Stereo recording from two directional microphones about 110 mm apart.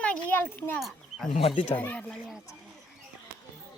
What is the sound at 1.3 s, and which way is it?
Speech, 65° left (ahead or behind).